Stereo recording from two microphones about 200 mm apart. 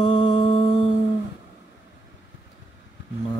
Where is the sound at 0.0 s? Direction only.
25° left (ahead or behind).